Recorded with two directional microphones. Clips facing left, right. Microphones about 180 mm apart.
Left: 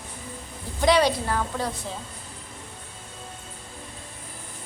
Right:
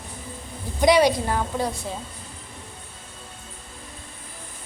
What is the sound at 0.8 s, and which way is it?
Speech, 15° right (ahead or behind).